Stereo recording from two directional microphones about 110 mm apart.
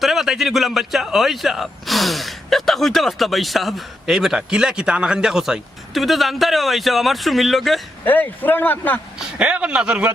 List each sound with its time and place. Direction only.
0.0 s speech: centre (ahead or behind)
8.0 s a man's voice: 15° left (ahead or behind)
9.4 s speech: 10° right (ahead or behind)